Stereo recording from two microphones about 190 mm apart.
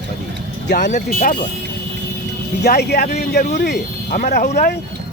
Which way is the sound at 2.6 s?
60° left (ahead or behind).